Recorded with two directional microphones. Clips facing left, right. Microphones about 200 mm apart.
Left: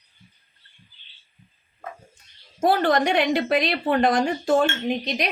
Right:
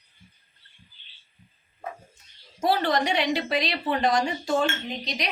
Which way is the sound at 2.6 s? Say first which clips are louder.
Left 4 dB; 50° left (ahead or behind).